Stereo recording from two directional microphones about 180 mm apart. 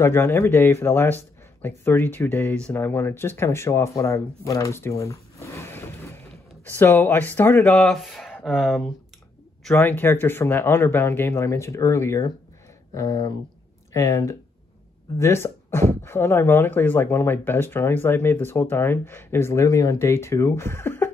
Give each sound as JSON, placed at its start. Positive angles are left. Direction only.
{"t": 0.0, "sound": "speech", "side_deg": 15}
{"t": 9.8, "sound": "speech", "side_deg": 10}